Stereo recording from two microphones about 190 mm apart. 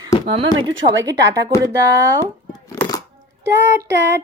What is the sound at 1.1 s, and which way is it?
Speech, 70° right (ahead or behind).